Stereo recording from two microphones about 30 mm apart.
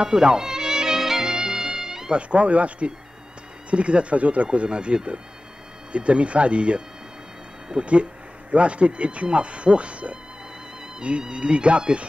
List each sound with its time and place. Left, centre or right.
0.1 s music: right
2.1 s speech: right
4.5 s speech: right
5.9 s speech: right
7.8 s speech: right